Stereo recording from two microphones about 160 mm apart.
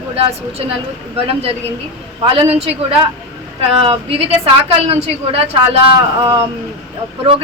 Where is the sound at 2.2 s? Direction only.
35° right (ahead or behind).